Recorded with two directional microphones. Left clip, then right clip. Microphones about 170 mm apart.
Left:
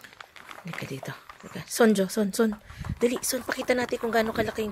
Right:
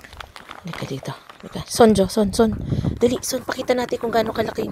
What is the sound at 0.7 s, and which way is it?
Speech, 20° right (ahead or behind).